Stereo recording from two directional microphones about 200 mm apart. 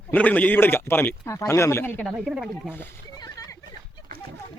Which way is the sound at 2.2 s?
5° right (ahead or behind).